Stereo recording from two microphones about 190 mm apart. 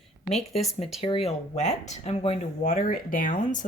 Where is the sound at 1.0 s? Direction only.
30° left (ahead or behind).